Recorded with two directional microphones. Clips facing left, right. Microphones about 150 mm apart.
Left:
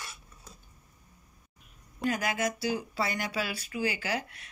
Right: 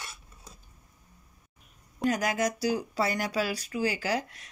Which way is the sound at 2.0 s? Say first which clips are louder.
Right 3 dB; 40° right (ahead or behind).